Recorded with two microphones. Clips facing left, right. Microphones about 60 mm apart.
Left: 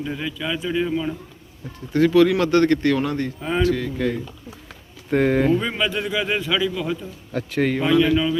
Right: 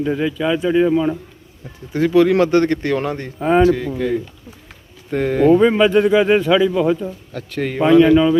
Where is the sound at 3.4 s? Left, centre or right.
Right.